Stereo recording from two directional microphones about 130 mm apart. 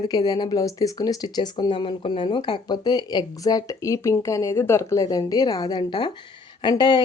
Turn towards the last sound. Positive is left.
turn(degrees=35)  # may be behind; listen again after turning